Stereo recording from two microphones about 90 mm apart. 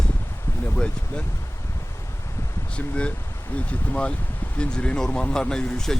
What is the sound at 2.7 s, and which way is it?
Speech, 10° left (ahead or behind).